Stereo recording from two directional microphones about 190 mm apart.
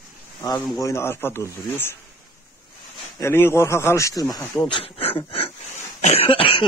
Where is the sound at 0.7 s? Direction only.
15° left (ahead or behind).